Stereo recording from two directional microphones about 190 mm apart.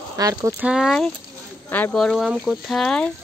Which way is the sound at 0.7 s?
Centre (ahead or behind).